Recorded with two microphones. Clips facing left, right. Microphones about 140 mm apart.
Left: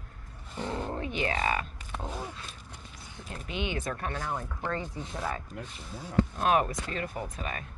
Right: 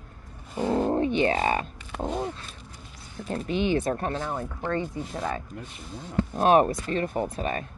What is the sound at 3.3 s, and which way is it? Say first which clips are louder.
A woman's voice: right 9 dB; 35° right (ahead or behind).